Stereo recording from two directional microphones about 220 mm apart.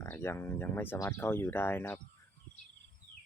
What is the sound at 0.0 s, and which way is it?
Speech, 10° left (ahead or behind).